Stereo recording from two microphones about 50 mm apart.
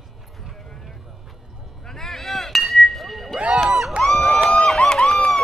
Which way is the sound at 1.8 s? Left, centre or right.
Centre.